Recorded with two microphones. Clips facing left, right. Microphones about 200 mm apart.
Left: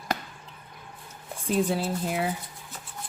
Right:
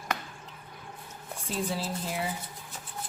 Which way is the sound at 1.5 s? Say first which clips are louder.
Left 7 dB; 60° left (ahead or behind).